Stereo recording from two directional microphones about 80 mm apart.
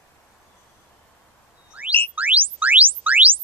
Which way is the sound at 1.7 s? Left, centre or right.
Centre.